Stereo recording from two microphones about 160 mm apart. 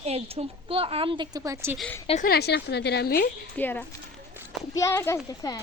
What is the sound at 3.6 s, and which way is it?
A child's voice, 10° left (ahead or behind).